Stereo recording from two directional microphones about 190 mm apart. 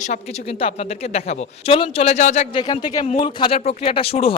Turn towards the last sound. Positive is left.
turn(degrees=30)  # may be behind; listen again after turning